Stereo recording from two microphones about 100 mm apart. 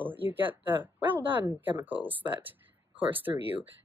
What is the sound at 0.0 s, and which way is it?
Speech, 20° right (ahead or behind).